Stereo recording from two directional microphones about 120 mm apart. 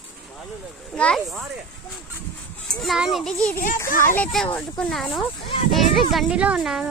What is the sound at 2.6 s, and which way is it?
Speech, centre (ahead or behind).